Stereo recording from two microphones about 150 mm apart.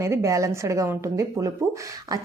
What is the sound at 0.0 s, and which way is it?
Speech, 20° right (ahead or behind).